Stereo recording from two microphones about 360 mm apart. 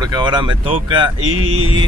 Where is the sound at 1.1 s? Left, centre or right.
Right.